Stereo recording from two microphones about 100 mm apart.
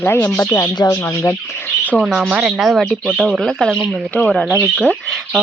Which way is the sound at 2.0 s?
5° right (ahead or behind).